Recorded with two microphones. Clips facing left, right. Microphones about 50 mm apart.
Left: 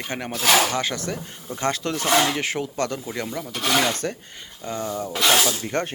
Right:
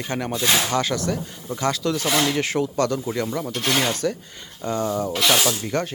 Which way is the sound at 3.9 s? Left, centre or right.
Left.